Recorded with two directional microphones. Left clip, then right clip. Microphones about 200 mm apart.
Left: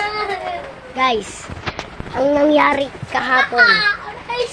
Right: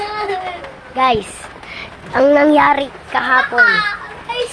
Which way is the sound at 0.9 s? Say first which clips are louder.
Right 3 dB; 10° right (ahead or behind).